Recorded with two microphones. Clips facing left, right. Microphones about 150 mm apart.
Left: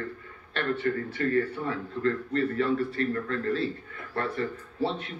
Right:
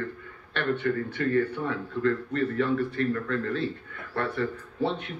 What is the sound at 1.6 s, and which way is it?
A man's voice, 35° left (ahead or behind).